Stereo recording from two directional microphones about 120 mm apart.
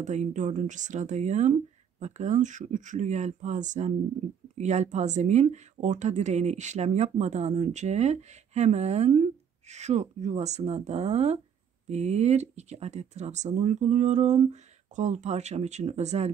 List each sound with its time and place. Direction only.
0.0 s speech: 80° right
4.6 s speech: 75° right (ahead or behind)